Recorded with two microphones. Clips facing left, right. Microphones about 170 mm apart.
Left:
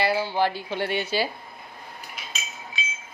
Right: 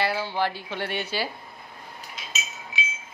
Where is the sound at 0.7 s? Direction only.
20° left (ahead or behind).